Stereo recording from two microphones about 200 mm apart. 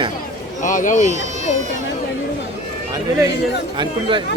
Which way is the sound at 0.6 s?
40° left (ahead or behind).